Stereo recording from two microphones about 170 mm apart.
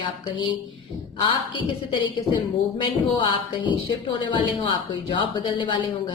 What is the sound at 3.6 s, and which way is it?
A woman's voice, 30° left (ahead or behind).